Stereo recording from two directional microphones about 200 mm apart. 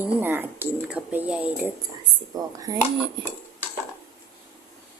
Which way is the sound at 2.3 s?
20° right (ahead or behind).